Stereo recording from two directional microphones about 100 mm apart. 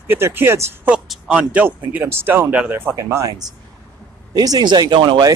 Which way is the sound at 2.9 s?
30° right (ahead or behind).